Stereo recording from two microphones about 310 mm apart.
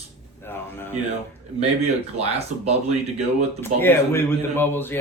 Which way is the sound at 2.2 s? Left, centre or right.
Centre.